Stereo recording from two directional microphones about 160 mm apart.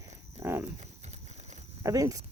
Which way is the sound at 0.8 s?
45° right (ahead or behind).